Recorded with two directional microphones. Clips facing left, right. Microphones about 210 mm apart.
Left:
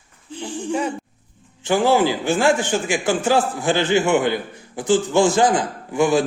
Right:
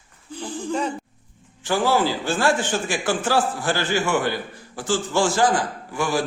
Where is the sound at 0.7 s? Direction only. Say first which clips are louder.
Left 2 dB; 10° left (ahead or behind).